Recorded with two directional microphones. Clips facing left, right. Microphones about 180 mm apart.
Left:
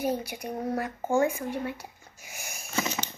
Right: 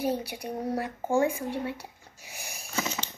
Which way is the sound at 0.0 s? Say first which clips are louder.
Even; 30° right (ahead or behind).